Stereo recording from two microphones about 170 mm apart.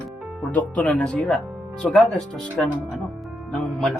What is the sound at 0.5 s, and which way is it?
Speech, 5° left (ahead or behind).